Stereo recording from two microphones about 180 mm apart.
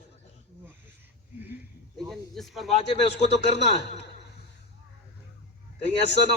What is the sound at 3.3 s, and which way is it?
Speech, 70° left (ahead or behind).